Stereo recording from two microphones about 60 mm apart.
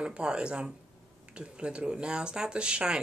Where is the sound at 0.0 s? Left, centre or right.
Centre.